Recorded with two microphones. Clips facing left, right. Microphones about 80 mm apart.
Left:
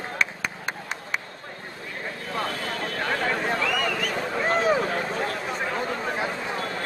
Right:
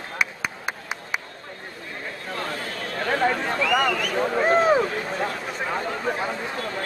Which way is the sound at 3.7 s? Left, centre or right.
Right.